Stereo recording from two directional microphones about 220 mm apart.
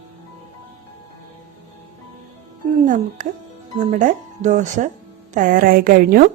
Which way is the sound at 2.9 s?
35° right (ahead or behind).